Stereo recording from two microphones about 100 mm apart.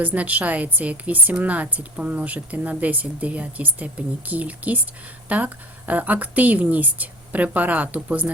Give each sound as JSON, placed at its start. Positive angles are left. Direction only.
{"t": 0.0, "sound": "a woman's voice", "side_deg": -15}